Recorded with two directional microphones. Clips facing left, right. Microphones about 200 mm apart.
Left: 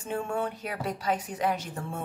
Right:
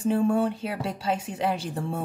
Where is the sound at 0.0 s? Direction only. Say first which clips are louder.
Right 8 dB; 35° right (ahead or behind).